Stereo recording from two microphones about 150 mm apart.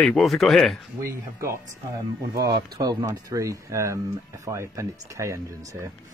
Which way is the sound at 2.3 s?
25° right (ahead or behind).